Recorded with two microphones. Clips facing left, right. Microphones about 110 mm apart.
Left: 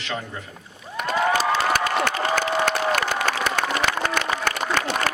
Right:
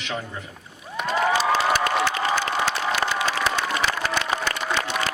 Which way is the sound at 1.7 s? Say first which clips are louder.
Even; 60° left (ahead or behind).